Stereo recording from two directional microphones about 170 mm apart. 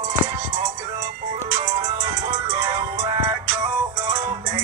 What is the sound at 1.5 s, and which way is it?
Music, 35° right (ahead or behind).